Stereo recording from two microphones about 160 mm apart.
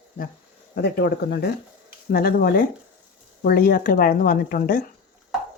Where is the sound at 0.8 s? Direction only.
90° left.